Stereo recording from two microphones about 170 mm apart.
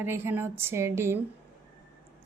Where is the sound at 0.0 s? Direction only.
15° right (ahead or behind).